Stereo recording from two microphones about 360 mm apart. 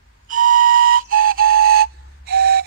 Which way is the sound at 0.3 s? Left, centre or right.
Right.